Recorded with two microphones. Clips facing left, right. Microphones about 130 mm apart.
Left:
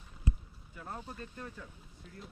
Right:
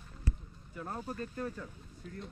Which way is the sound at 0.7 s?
45° right (ahead or behind).